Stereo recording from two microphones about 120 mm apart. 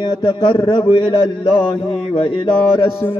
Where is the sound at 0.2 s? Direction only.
40° left (ahead or behind).